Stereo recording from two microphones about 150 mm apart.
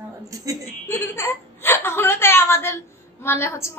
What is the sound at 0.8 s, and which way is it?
A woman's voice, 15° left (ahead or behind).